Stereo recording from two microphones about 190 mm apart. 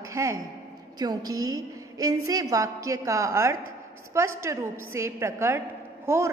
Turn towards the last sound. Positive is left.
turn(degrees=-15)  # may be behind; listen again after turning